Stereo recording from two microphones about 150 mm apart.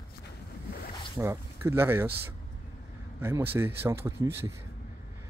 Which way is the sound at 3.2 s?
15° right (ahead or behind).